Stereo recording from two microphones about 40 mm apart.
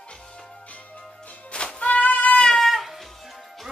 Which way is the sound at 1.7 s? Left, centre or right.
Left.